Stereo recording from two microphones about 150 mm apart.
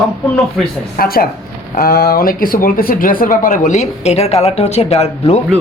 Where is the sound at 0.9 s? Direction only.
85° left; by 5.4 s 45° left (ahead or behind).